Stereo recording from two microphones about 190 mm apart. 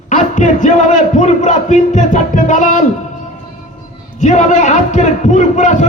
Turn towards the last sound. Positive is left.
turn(degrees=40)  # may be behind; listen again after turning